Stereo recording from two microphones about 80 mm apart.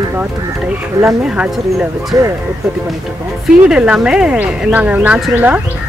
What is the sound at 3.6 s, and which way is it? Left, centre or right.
Speech, centre.